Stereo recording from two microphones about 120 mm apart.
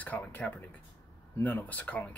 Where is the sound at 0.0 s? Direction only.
15° left (ahead or behind).